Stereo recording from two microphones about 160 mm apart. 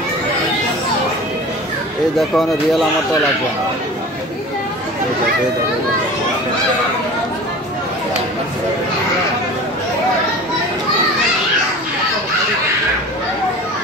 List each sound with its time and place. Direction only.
2.1 s speech: centre (ahead or behind)